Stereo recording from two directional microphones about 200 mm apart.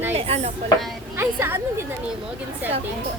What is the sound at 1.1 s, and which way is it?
Speech, 10° right (ahead or behind).